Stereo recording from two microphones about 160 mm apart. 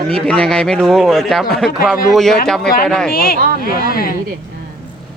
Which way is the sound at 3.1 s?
70° left (ahead or behind).